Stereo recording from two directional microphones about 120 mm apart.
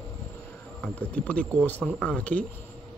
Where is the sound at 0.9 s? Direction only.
10° left (ahead or behind).